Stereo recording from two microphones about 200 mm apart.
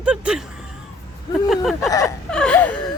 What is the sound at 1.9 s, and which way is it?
Speech, 15° left (ahead or behind).